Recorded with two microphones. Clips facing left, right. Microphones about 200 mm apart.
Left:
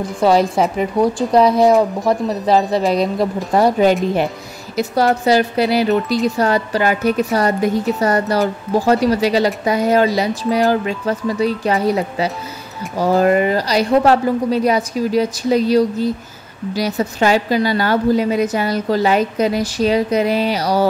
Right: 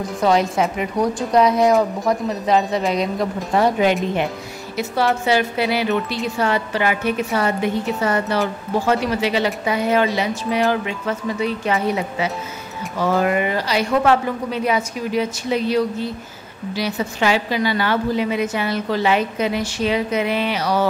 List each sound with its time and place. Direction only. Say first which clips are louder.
0.2 s a woman's voice: left 4 dB; 35° left (ahead or behind)